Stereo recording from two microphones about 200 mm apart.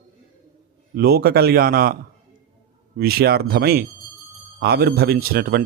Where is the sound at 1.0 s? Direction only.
50° right (ahead or behind).